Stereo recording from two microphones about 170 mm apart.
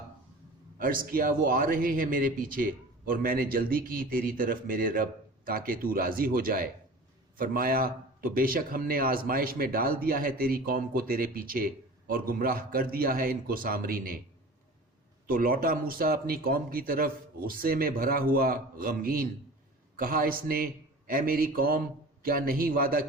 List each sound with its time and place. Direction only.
0.8 s a man's voice: 55° right (ahead or behind)
15.3 s a man's voice: 55° right (ahead or behind)